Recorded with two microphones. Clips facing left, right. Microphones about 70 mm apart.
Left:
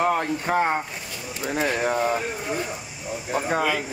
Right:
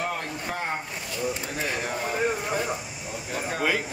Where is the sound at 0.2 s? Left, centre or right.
Left.